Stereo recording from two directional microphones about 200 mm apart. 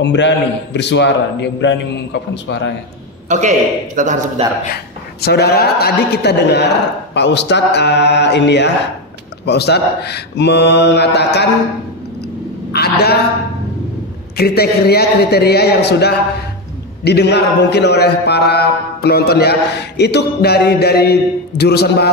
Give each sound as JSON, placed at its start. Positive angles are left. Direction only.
{"t": 0.0, "sound": "a man's voice", "side_deg": 60}
{"t": 3.3, "sound": "a man's voice", "side_deg": -35}
{"t": 5.2, "sound": "a man's voice", "side_deg": 55}
{"t": 12.7, "sound": "a man's voice", "side_deg": 55}
{"t": 14.3, "sound": "a man's voice", "side_deg": 50}